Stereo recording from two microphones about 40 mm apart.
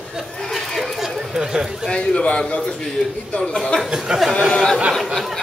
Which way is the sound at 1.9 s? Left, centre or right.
Left.